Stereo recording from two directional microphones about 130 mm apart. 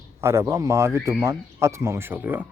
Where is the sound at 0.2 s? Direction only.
20° right (ahead or behind).